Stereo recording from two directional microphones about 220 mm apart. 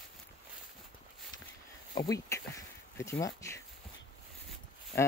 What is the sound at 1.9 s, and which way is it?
Speech, 15° left (ahead or behind).